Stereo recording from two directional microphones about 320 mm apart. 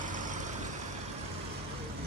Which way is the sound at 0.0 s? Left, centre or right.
Right.